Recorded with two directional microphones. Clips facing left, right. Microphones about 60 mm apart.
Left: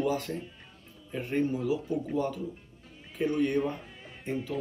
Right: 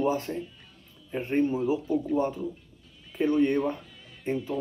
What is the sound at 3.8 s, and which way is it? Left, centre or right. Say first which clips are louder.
Music: left 2 dB; left.